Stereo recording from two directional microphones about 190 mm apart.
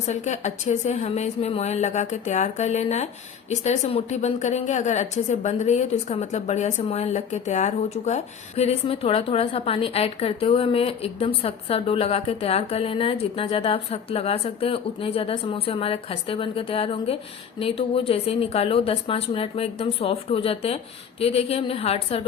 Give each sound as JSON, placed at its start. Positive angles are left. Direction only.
{"t": 0.1, "sound": "a woman's voice", "side_deg": 40}